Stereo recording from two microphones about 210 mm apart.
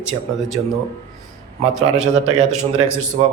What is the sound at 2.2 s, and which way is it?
Speech, 30° right (ahead or behind).